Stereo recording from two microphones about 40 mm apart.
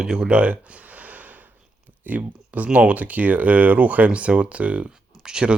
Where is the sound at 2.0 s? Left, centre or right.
Right.